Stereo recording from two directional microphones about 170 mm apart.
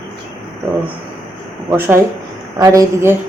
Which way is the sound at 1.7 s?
15° right (ahead or behind).